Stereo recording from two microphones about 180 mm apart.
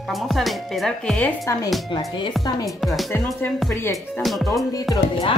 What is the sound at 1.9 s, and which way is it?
Speech, 25° left (ahead or behind).